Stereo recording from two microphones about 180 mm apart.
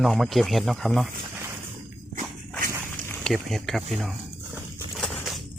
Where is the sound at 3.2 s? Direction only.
Centre (ahead or behind).